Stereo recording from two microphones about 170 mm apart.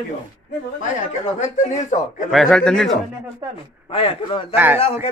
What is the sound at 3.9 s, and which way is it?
Speech, 30° left (ahead or behind).